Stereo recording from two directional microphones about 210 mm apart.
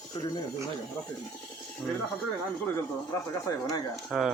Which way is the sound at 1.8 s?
5° left (ahead or behind).